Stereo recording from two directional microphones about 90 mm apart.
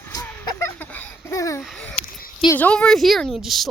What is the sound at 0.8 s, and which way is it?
Laughter, 20° left (ahead or behind).